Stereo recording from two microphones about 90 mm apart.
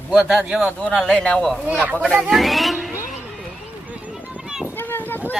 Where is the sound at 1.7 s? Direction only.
20° right (ahead or behind).